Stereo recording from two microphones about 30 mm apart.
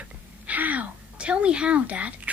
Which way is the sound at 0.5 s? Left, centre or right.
Right.